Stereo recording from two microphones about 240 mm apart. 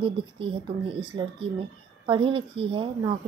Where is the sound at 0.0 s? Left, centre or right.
Right.